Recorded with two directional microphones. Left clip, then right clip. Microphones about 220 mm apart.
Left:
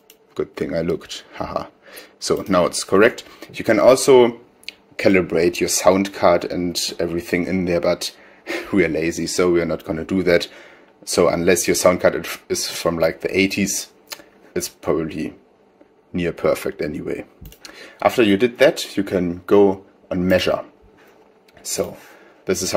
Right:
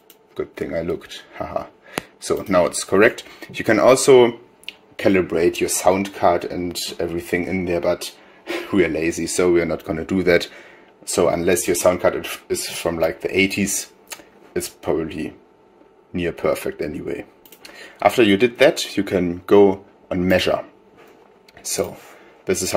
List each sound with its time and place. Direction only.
0.4 s speech: 15° left (ahead or behind)
3.1 s speech: centre (ahead or behind)
4.6 s speech: 10° left (ahead or behind)